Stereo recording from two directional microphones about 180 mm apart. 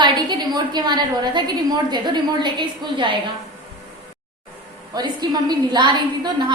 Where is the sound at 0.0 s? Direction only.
25° right (ahead or behind).